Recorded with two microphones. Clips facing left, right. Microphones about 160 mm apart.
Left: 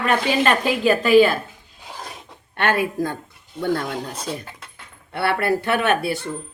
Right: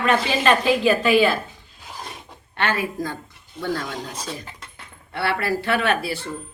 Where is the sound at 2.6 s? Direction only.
55° left (ahead or behind).